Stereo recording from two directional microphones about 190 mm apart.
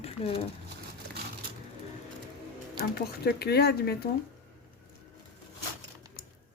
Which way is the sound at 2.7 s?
55° left (ahead or behind).